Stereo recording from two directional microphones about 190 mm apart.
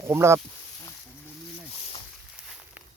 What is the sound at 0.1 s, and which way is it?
Speech, 15° right (ahead or behind).